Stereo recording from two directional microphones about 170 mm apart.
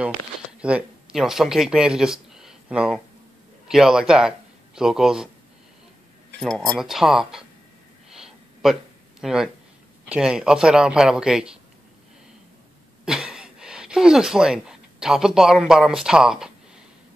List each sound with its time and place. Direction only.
0.0 s a man's voice: 5° right (ahead or behind)
6.7 s a man's voice: centre (ahead or behind)
8.1 s a sound: centre (ahead or behind)
9.2 s a man's voice: centre (ahead or behind)
13.0 s speech: 5° right (ahead or behind)